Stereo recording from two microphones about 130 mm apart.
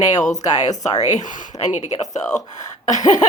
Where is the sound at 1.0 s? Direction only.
70° left (ahead or behind).